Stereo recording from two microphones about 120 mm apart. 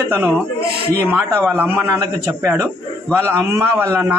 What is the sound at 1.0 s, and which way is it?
A man's voice, 15° right (ahead or behind).